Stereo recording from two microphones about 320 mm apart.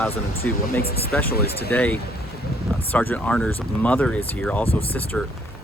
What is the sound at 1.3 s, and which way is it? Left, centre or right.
Speech, left.